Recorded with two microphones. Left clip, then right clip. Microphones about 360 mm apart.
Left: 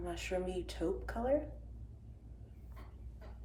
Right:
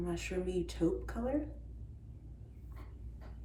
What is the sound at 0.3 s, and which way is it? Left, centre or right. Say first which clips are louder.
Speech: left 1 dB; left.